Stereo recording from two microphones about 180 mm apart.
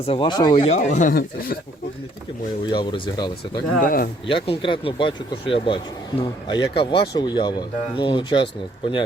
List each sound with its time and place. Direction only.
0.0 s speech: 30° left (ahead or behind); by 1.5 s 55° left (ahead or behind)
2.6 s speech: 25° left (ahead or behind)
3.8 s speech: 50° left (ahead or behind)
4.3 s speech: 30° left (ahead or behind)